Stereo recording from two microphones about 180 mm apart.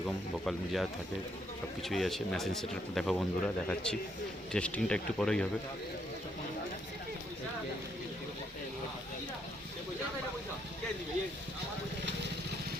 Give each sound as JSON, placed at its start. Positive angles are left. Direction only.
{"t": 0.4, "sound": "speech", "side_deg": 0}